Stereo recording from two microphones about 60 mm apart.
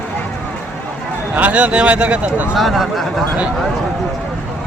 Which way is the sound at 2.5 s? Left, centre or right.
Centre.